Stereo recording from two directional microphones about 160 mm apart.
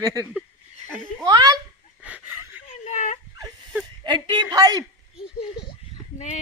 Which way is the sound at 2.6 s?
45° left (ahead or behind).